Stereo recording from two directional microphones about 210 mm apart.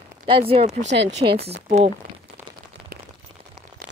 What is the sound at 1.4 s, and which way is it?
Speech, 30° right (ahead or behind).